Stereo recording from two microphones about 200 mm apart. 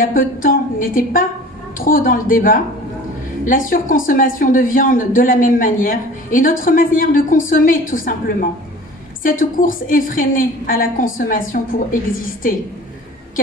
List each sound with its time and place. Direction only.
0.0 s speech: 45° left (ahead or behind)